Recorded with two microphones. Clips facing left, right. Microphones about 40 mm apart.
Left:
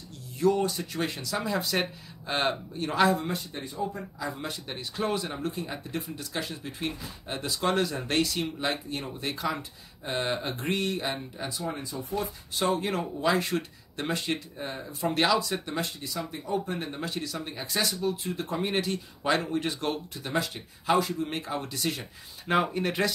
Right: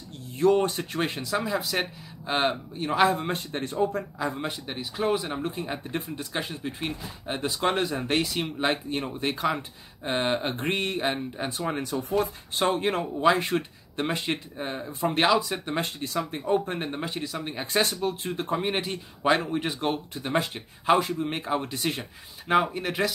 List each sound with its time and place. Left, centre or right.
0.4 s speech: right
1.3 s a man's voice: centre
3.1 s speech: right
3.6 s speech: right
4.2 s speech: right
4.6 s a man's voice: centre; by 11.6 s right
11.6 s speech: right
12.5 s speech: right
13.2 s speech: right
15.7 s speech: right
17.0 s speech: right
18.6 s speech: right
22.5 s speech: centre